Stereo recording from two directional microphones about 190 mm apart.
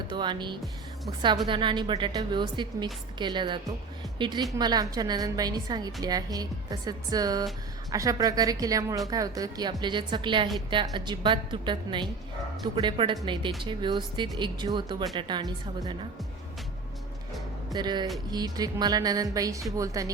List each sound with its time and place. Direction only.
0.1 s a woman's voice: 25° right (ahead or behind)
17.7 s a woman's voice: 25° right (ahead or behind)